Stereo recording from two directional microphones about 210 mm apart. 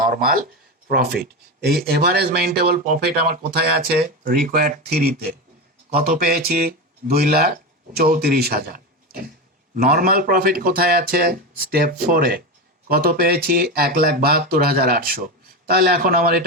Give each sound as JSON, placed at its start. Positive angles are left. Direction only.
{"t": 0.9, "sound": "speech", "side_deg": -45}